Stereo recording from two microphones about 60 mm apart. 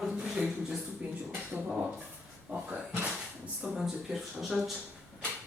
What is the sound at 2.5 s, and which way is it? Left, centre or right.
Speech, right.